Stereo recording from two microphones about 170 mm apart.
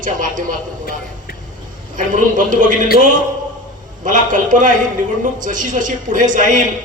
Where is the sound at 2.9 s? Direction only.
60° left (ahead or behind).